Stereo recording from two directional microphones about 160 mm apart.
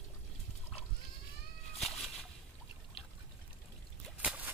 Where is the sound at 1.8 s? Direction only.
Centre (ahead or behind).